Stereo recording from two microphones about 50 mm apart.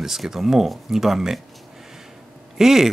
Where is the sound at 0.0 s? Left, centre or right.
Centre.